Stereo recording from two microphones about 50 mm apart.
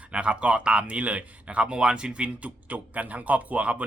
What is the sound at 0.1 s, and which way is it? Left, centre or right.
Speech, right.